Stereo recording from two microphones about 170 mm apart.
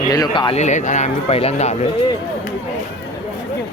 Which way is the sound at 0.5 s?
45° left (ahead or behind).